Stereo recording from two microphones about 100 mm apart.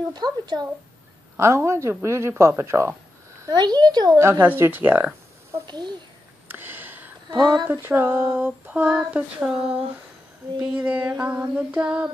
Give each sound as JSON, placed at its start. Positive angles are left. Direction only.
{"t": 0.1, "sound": "speech", "side_deg": -45}
{"t": 1.3, "sound": "speech", "side_deg": -25}
{"t": 3.4, "sound": "speech", "side_deg": -45}
{"t": 4.2, "sound": "speech", "side_deg": -30}
{"t": 5.7, "sound": "speech", "side_deg": -50}
{"t": 6.5, "sound": "a sound", "side_deg": -20}
{"t": 7.2, "sound": "speech", "side_deg": -50}
{"t": 7.8, "sound": "speech", "side_deg": -20}
{"t": 10.6, "sound": "female singing", "side_deg": -15}